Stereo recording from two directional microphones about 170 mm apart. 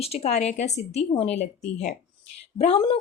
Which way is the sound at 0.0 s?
35° left (ahead or behind).